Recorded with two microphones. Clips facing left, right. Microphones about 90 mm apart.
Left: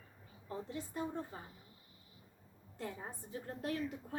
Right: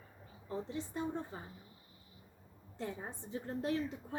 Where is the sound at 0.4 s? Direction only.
25° right (ahead or behind).